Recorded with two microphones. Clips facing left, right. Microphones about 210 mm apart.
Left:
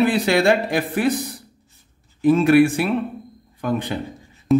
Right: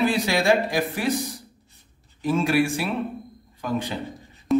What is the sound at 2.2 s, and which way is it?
A man's voice, 60° left (ahead or behind).